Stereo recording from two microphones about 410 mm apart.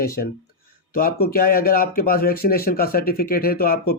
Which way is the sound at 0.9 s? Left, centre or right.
Left.